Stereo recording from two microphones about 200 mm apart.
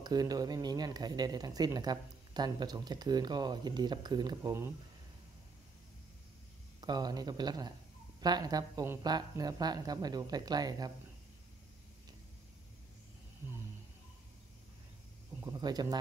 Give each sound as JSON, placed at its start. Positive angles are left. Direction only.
{"t": 0.0, "sound": "speech", "side_deg": -20}
{"t": 6.8, "sound": "speech", "side_deg": -20}
{"t": 15.4, "sound": "speech", "side_deg": -20}